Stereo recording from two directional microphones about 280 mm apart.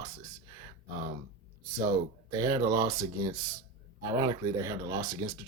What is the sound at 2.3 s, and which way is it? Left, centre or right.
Speech, centre.